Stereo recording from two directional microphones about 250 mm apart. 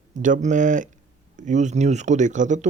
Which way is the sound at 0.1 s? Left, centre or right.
Right.